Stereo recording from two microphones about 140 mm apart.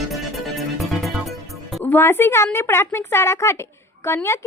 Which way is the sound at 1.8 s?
15° left (ahead or behind).